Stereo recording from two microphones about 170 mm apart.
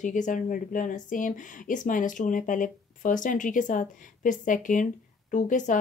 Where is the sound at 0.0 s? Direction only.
45° left (ahead or behind).